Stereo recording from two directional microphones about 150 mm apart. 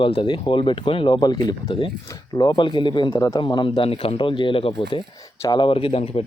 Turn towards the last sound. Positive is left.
turn(degrees=40)  # may be behind; listen again after turning